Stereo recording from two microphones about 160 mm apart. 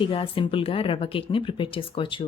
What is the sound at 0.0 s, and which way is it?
A woman's voice, 35° left (ahead or behind).